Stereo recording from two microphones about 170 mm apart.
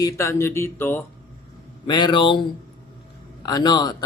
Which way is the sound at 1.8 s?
25° left (ahead or behind).